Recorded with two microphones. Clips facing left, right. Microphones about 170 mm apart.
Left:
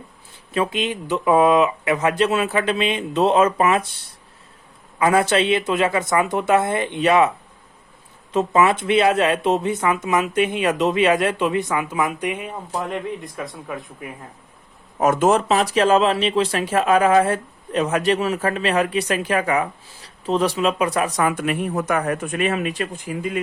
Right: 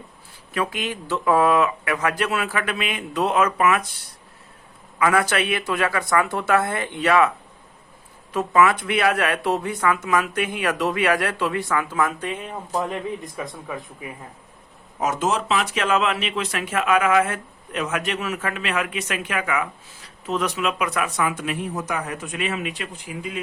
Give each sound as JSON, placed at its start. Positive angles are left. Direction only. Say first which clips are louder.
{"t": 0.5, "sound": "speech", "louder": "left 4 dB", "side_deg": 25}
{"t": 4.9, "sound": "speech", "louder": "left 3 dB", "side_deg": 25}
{"t": 12.7, "sound": "a man's voice", "louder": "right 1 dB", "side_deg": 0}
{"t": 14.9, "sound": "speech", "louder": "left 6 dB", "side_deg": 55}